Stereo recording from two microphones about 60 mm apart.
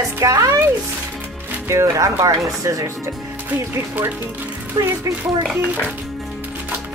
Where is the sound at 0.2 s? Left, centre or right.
Right.